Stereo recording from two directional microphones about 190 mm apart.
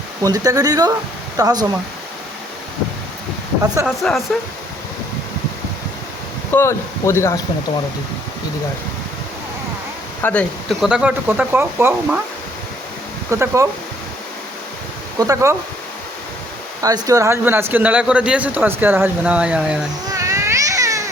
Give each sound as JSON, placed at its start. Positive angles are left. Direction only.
{"t": 0.2, "sound": "speech", "side_deg": -20}
{"t": 3.8, "sound": "speech", "side_deg": 0}
{"t": 6.5, "sound": "speech", "side_deg": 15}
{"t": 10.2, "sound": "speech", "side_deg": 5}
{"t": 13.3, "sound": "speech", "side_deg": -15}
{"t": 15.2, "sound": "speech", "side_deg": -15}
{"t": 16.8, "sound": "speech", "side_deg": -20}
{"t": 20.1, "sound": "cat", "side_deg": -15}